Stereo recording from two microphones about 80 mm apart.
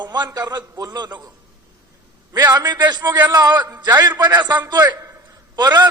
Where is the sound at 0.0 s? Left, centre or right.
Right.